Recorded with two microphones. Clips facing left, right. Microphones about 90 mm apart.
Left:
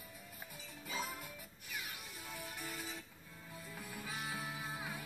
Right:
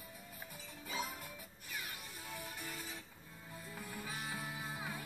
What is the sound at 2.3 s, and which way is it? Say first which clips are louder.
Music: even; centre (ahead or behind).